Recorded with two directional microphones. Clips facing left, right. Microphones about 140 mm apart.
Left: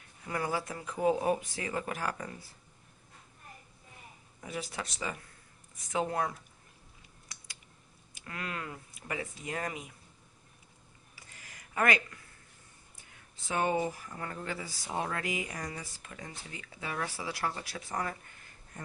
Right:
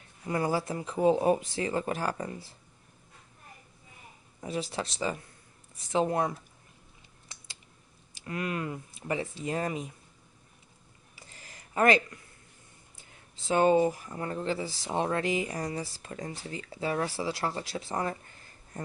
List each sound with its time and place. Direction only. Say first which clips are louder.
0.3 s speech: right 5 dB; 30° right (ahead or behind)
4.4 s speech: right 6 dB; 30° right (ahead or behind)
8.1 s speech: right 7 dB; 25° right (ahead or behind)
11.1 s a sound: right 3 dB; 30° right (ahead or behind)
12.9 s speech: right 2 dB; 25° right (ahead or behind)